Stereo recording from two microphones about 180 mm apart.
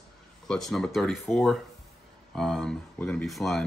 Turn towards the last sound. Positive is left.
turn(degrees=0)  # may be behind; listen again after turning